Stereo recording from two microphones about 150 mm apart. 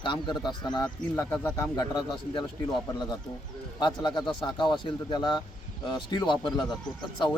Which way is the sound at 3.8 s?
30° left (ahead or behind).